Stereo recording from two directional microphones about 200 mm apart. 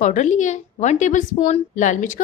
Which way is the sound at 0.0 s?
35° left (ahead or behind).